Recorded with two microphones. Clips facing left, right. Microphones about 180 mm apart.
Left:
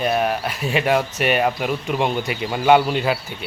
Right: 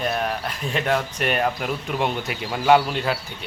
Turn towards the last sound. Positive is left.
turn(degrees=5)  # may be behind; listen again after turning